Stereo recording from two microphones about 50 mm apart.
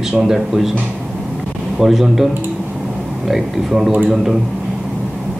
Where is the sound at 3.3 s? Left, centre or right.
Centre.